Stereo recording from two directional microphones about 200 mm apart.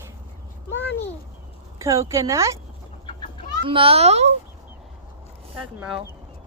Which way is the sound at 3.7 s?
25° right (ahead or behind).